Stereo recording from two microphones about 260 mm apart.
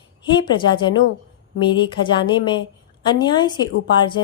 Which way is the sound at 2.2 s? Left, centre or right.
Centre.